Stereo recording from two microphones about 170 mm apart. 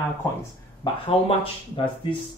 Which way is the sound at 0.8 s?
25° left (ahead or behind).